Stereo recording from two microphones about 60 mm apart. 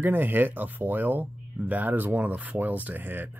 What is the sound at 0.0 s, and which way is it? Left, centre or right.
Speech, right.